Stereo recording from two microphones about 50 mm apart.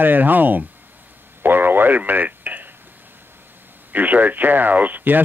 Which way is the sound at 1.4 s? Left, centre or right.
Right.